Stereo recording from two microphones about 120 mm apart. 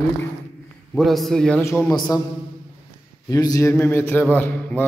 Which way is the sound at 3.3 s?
30° left (ahead or behind).